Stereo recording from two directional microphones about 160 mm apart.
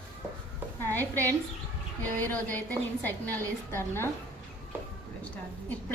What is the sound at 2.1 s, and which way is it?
A woman's voice, 10° left (ahead or behind).